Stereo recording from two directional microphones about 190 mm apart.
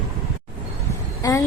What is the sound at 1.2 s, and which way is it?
Speech, 20° left (ahead or behind).